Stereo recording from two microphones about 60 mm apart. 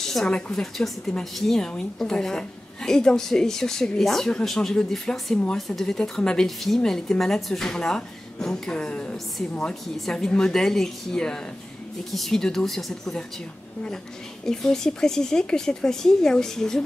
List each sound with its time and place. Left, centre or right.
0.0 s speech: centre
14.4 s speech: centre